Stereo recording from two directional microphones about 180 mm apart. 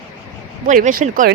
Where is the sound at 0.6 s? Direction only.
45° right (ahead or behind).